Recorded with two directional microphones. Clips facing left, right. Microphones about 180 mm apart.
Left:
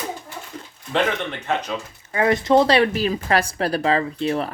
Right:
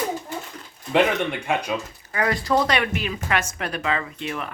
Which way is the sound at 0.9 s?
10° right (ahead or behind).